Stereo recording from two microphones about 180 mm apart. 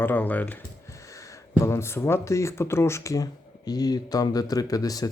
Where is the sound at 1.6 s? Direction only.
15° left (ahead or behind).